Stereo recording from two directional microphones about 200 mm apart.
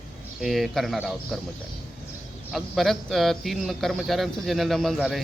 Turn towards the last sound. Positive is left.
turn(degrees=0)  # may be behind; listen again after turning